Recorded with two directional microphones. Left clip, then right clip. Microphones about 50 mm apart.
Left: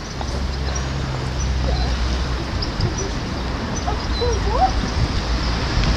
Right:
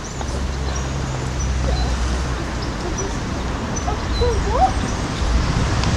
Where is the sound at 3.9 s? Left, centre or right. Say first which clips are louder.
Right 1 dB; left.